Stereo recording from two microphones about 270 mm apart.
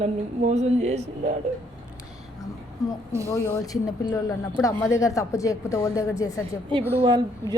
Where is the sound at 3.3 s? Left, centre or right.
Centre.